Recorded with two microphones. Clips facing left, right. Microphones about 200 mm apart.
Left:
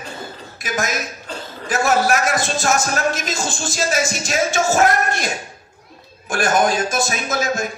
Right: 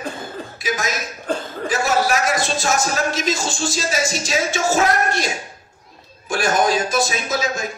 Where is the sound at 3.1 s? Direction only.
50° left (ahead or behind).